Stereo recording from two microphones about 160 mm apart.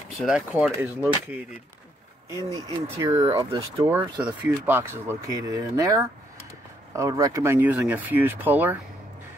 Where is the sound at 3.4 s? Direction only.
35° right (ahead or behind).